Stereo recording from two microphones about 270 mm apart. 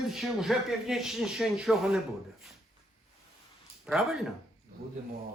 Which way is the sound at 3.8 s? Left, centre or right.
Centre.